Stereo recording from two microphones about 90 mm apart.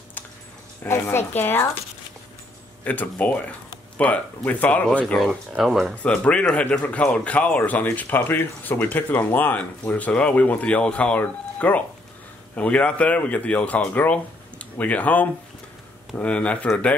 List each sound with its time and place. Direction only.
0.8 s speech: 30° left (ahead or behind)
2.8 s speech: 20° left (ahead or behind)
5.0 s speech: centre (ahead or behind)
6.0 s speech: 10° left (ahead or behind)